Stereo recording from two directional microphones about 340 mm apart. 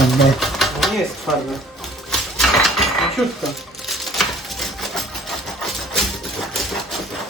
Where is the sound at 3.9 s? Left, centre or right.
Centre.